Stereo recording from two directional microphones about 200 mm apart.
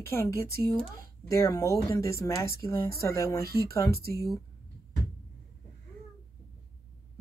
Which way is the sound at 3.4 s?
50° right (ahead or behind).